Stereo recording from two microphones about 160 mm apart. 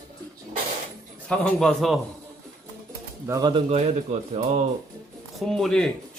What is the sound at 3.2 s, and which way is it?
Speech, 20° right (ahead or behind).